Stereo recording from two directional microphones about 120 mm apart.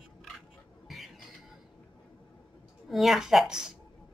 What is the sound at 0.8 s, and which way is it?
Chicken, centre (ahead or behind).